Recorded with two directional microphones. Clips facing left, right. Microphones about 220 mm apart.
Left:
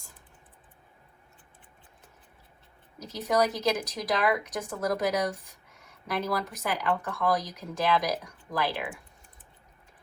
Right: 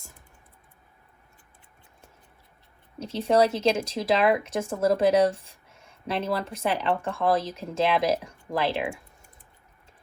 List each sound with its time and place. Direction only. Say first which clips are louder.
3.0 s speech: right 5 dB; 30° right (ahead or behind)